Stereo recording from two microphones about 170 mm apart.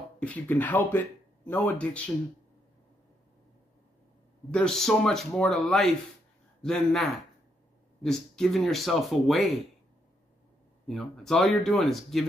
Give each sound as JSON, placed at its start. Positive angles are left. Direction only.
{"t": 0.2, "sound": "speech", "side_deg": 10}
{"t": 4.5, "sound": "speech", "side_deg": 5}
{"t": 10.9, "sound": "speech", "side_deg": 0}